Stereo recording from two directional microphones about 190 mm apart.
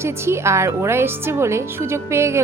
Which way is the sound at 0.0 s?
15° right (ahead or behind).